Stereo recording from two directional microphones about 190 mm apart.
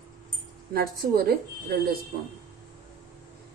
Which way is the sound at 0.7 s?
55° right (ahead or behind).